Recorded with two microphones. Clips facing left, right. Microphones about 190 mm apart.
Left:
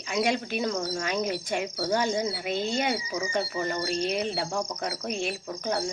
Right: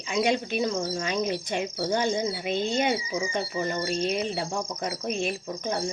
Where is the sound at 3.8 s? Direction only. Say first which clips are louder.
Even; centre (ahead or behind).